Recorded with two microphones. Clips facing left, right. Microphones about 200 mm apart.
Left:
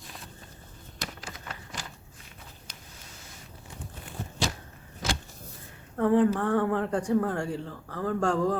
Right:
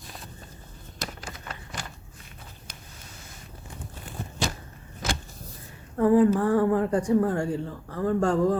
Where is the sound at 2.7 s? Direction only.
55° right (ahead or behind).